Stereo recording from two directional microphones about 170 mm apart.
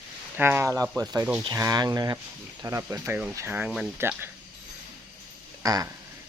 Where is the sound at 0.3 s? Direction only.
15° right (ahead or behind).